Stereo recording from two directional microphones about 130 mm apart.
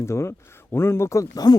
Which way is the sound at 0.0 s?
20° left (ahead or behind).